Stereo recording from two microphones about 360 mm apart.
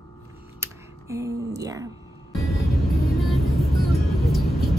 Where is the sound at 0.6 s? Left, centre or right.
Centre.